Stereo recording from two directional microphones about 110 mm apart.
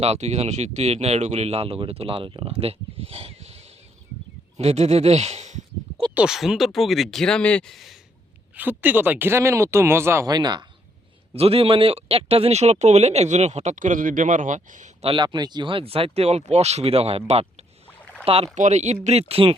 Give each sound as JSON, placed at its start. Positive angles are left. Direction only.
{"t": 0.0, "sound": "speech", "side_deg": -80}
{"t": 6.1, "sound": "speech", "side_deg": -5}
{"t": 8.5, "sound": "speech", "side_deg": -15}
{"t": 10.2, "sound": "speech", "side_deg": -40}
{"t": 11.3, "sound": "speech", "side_deg": -60}
{"t": 15.1, "sound": "speech", "side_deg": -45}
{"t": 18.6, "sound": "speech", "side_deg": -90}